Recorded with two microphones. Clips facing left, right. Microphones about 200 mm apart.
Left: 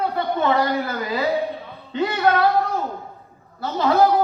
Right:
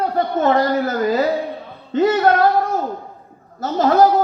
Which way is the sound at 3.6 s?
45° right (ahead or behind).